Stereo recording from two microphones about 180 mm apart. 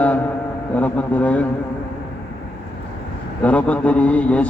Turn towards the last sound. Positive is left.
turn(degrees=5)  # may be behind; listen again after turning